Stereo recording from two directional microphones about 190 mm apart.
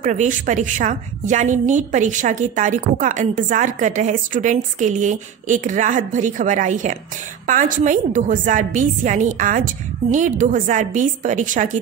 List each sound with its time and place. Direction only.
0.0 s a woman's voice: 40° right (ahead or behind)